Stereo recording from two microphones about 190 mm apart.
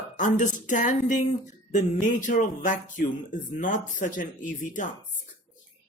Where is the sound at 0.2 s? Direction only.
40° left (ahead or behind).